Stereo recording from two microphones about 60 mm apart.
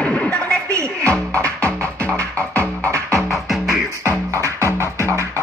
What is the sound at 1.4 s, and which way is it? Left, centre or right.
Music, right.